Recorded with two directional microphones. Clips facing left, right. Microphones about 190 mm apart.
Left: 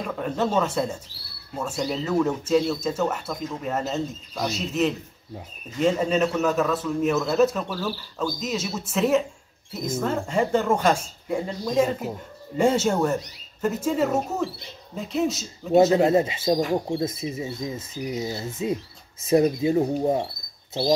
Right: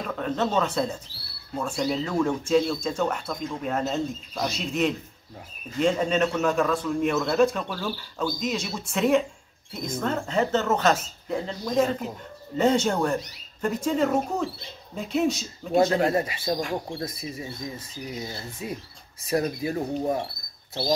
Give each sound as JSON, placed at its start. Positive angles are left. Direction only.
{"t": 0.0, "sound": "speech", "side_deg": 10}
{"t": 16.0, "sound": "speech", "side_deg": 20}